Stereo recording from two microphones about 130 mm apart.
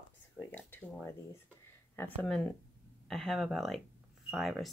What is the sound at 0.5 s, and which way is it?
Speech, 15° left (ahead or behind).